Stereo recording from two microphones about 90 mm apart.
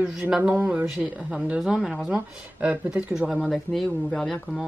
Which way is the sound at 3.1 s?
5° right (ahead or behind).